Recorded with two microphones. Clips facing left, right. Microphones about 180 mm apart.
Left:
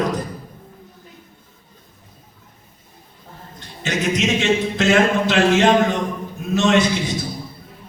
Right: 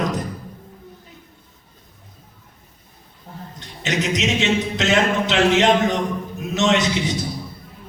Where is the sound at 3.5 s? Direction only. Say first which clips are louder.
Even; 20° right (ahead or behind).